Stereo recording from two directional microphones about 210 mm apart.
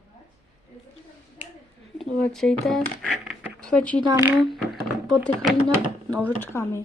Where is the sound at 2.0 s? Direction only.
Centre (ahead or behind).